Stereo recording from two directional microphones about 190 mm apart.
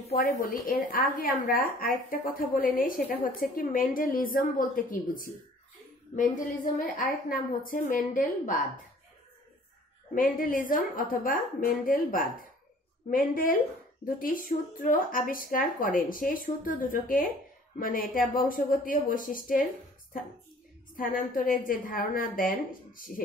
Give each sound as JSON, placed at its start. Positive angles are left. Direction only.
{"t": 0.1, "sound": "a woman's voice", "side_deg": 45}
{"t": 10.1, "sound": "a woman's voice", "side_deg": 45}
{"t": 20.9, "sound": "a woman's voice", "side_deg": 45}